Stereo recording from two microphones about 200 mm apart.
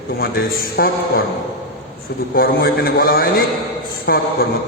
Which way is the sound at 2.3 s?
50° left (ahead or behind).